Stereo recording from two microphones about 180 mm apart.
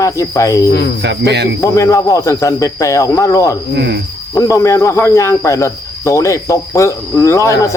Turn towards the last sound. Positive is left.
turn(degrees=15)  # may be behind; listen again after turning